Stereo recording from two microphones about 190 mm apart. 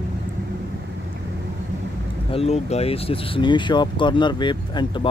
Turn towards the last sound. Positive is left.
turn(degrees=25)  # may be behind; listen again after turning